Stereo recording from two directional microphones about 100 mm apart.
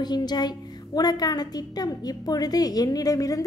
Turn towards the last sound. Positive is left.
turn(degrees=35)  # may be behind; listen again after turning